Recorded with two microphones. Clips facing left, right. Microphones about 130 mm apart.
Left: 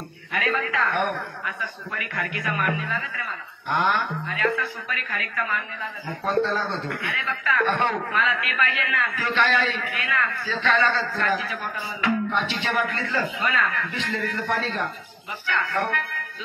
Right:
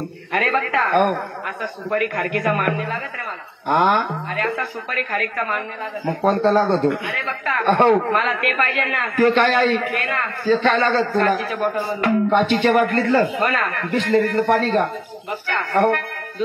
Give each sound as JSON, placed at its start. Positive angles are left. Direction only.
{"t": 0.3, "sound": "a man's voice", "side_deg": -55}